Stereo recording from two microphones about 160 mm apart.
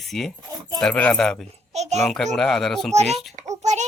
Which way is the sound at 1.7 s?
45° right (ahead or behind).